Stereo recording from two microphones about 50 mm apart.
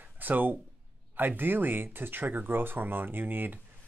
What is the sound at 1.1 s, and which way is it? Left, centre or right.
Speech, right.